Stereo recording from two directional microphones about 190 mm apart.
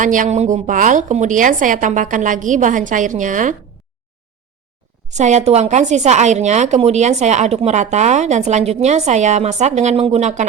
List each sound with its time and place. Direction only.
0.0 s a woman's voice: 45° right (ahead or behind)
5.0 s a woman's voice: 40° right (ahead or behind)